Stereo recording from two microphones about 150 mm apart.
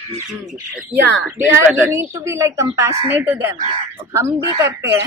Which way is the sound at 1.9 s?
20° right (ahead or behind).